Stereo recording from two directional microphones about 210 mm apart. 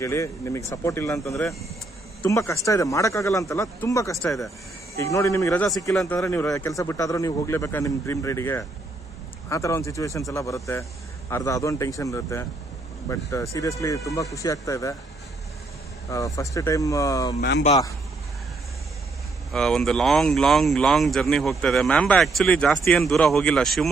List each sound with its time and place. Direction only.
0.0 s speech: 15° left (ahead or behind)
2.2 s speech: 15° left (ahead or behind)
16.1 s speech: 15° left (ahead or behind)
17.4 s speech: 55° left (ahead or behind)
19.5 s speech: centre (ahead or behind)